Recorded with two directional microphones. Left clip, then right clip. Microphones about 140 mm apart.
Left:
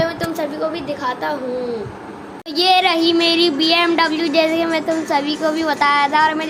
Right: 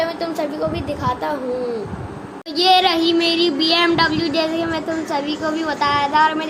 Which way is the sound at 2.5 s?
20° left (ahead or behind).